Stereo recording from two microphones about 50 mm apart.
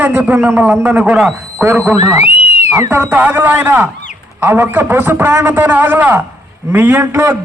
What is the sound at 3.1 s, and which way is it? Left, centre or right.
A man's voice, right.